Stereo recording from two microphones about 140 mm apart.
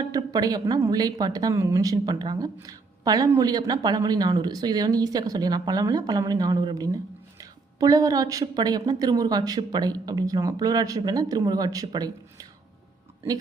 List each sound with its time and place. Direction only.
0.0 s a woman's voice: 30° right (ahead or behind)